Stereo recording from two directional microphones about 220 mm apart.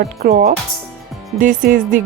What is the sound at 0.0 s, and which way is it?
Speech, 40° right (ahead or behind).